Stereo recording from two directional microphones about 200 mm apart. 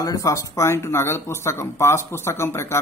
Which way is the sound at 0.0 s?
15° left (ahead or behind).